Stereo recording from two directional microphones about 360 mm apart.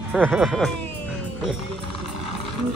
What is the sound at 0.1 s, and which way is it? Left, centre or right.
Speech, centre.